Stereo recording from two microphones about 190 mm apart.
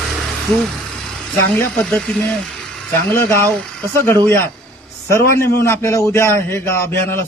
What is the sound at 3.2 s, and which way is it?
A man's voice, 15° left (ahead or behind).